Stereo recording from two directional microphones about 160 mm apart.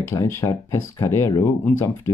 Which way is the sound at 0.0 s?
20° left (ahead or behind).